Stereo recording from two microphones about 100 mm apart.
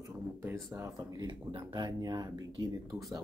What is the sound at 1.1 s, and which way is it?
Speech, 50° right (ahead or behind).